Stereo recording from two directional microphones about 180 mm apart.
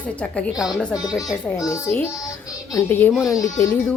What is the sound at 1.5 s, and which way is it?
Speech, 20° left (ahead or behind).